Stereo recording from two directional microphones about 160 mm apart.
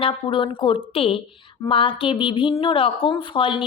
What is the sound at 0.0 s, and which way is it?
Speech, 35° left (ahead or behind).